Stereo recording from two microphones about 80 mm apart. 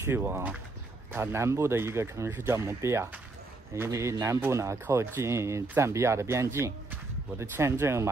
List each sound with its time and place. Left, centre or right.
0.0 s speech: right